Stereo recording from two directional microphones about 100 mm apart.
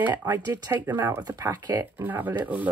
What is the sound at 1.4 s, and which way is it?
Speech, 35° right (ahead or behind).